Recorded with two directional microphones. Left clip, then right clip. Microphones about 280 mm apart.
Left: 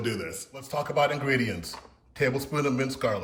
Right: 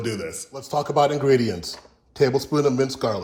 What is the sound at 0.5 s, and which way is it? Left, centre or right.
Speech, centre.